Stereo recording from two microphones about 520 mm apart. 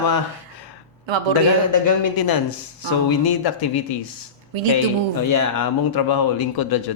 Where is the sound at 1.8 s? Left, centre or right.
Left.